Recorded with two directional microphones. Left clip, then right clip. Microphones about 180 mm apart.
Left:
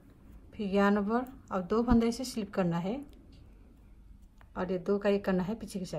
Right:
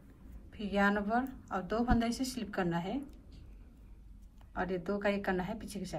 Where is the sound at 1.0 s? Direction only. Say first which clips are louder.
Left 1 dB; 30° left (ahead or behind).